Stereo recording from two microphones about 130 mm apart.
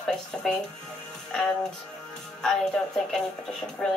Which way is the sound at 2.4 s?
5° left (ahead or behind).